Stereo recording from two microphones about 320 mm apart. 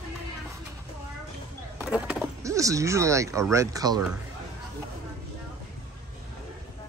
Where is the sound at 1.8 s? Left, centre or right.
Centre.